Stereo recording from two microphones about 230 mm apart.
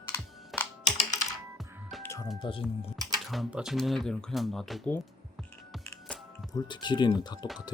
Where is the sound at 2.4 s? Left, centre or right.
Left.